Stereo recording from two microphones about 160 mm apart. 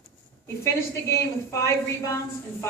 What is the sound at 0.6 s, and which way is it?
A woman's voice, 15° left (ahead or behind).